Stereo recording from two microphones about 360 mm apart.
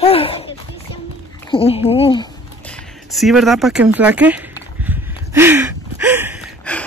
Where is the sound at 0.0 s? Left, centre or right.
Centre.